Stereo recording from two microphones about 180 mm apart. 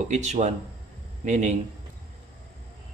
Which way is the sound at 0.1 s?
40° right (ahead or behind).